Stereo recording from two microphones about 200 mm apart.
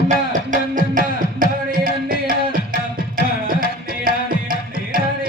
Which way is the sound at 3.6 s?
45° right (ahead or behind).